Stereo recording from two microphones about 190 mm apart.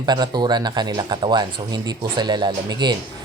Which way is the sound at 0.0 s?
20° right (ahead or behind).